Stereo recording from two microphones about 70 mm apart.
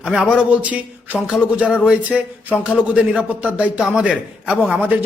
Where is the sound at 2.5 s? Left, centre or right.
Centre.